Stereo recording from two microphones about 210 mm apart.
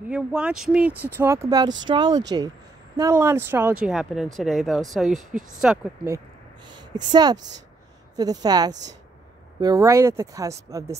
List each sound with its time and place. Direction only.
0.1 s speech: 5° right (ahead or behind)
6.1 s a sound: 20° right (ahead or behind)
7.1 s speech: 20° right (ahead or behind)